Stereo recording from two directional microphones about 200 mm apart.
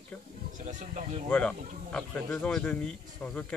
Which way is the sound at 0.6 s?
35° right (ahead or behind).